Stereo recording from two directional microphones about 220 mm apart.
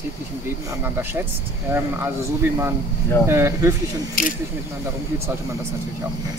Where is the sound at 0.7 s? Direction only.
10° right (ahead or behind).